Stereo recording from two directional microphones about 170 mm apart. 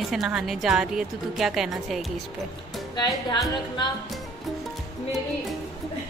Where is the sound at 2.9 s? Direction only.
25° left (ahead or behind).